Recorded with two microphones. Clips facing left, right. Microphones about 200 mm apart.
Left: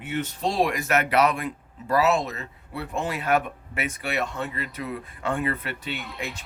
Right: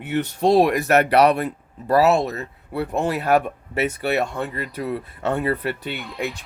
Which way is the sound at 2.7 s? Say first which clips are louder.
Right 7 dB; 55° right (ahead or behind).